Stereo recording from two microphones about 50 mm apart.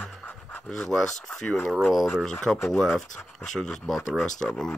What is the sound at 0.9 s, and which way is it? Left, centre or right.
Speech, centre.